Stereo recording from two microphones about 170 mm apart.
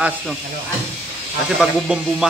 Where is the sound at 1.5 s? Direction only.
5° right (ahead or behind).